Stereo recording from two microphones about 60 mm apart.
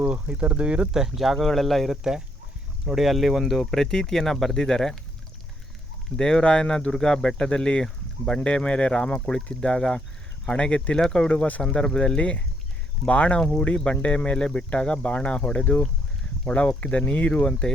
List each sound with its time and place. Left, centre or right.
0.0 s speech: centre
6.1 s speech: centre